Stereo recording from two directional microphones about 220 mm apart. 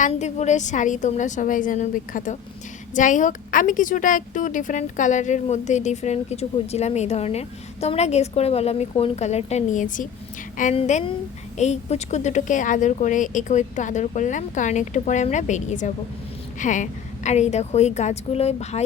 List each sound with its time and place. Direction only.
0.0 s a woman's voice: 30° left (ahead or behind)